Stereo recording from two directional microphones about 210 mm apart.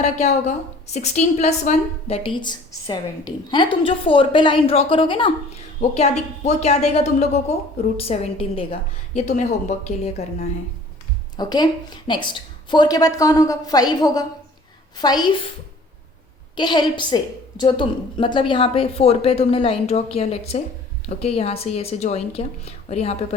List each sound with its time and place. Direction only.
0.0 s a woman's voice: 35° left (ahead or behind)
11.3 s a woman's voice: 20° left (ahead or behind)
16.6 s a woman's voice: 20° left (ahead or behind)